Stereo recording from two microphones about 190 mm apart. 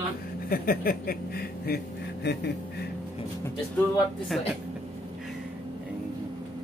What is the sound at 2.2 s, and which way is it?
Speech, 60° left (ahead or behind).